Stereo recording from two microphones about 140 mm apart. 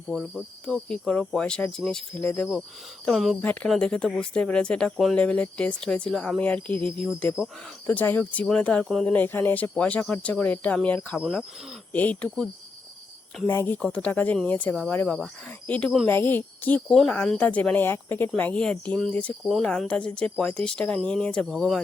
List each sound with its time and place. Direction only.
0.1 s speech: centre (ahead or behind)
13.5 s speech: 20° left (ahead or behind)
16.0 s speech: 15° left (ahead or behind)